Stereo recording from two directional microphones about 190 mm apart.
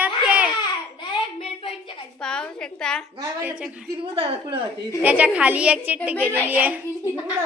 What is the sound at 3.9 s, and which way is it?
Speech, 25° right (ahead or behind).